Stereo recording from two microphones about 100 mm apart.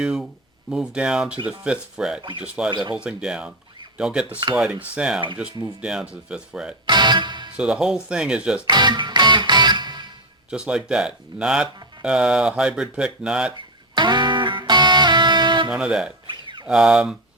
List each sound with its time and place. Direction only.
0.0 s speech: 5° right (ahead or behind)
6.8 s music: 45° right (ahead or behind)
7.5 s speech: 10° right (ahead or behind)
8.6 s music: 45° right (ahead or behind)
10.5 s speech: 10° right (ahead or behind)
13.9 s music: 50° right (ahead or behind)
15.7 s speech: 10° right (ahead or behind)
16.2 s a sound: 50° right (ahead or behind)
16.6 s speech: 5° right (ahead or behind)